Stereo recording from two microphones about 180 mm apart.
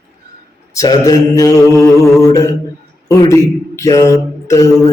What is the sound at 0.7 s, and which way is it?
A man's voice, 20° left (ahead or behind).